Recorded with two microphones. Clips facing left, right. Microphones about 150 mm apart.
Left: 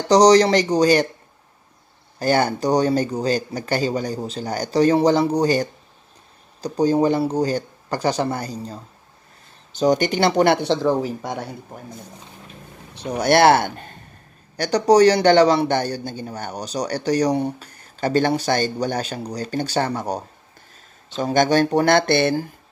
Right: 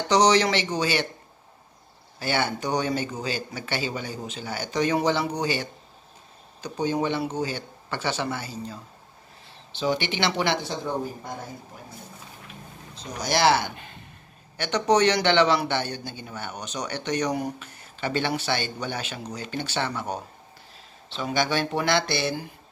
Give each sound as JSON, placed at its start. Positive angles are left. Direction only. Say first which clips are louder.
{"t": 0.1, "sound": "a man's voice", "louder": "left 7 dB", "side_deg": 35}
{"t": 2.1, "sound": "a man's voice", "louder": "left 7 dB", "side_deg": 40}
{"t": 10.7, "sound": "speech", "louder": "left 10 dB", "side_deg": 90}
{"t": 12.9, "sound": "speech", "louder": "left 10 dB", "side_deg": 60}
{"t": 14.6, "sound": "a man's voice", "louder": "left 7 dB", "side_deg": 35}